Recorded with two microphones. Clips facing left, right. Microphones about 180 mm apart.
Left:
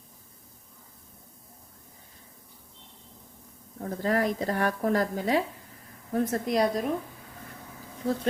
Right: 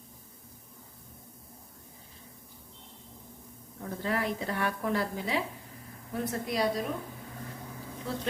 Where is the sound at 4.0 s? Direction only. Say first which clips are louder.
Left 5 dB; 40° left (ahead or behind).